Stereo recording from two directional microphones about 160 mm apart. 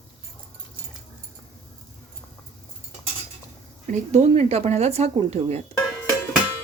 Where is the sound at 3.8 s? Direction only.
50° right (ahead or behind).